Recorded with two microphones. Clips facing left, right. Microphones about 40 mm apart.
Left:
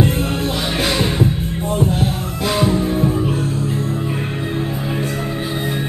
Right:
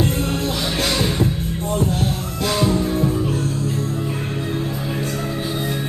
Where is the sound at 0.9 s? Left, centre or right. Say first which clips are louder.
Left 2 dB; centre.